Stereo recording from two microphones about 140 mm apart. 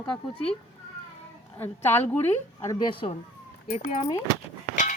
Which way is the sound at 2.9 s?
40° left (ahead or behind).